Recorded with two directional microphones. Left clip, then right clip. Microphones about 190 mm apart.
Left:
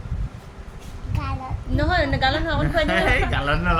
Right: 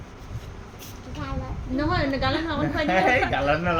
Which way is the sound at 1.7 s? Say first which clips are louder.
Left 3 dB; 50° left (ahead or behind).